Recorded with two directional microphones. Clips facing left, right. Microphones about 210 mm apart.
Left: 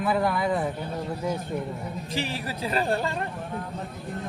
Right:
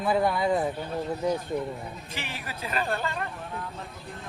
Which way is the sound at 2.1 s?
35° left (ahead or behind).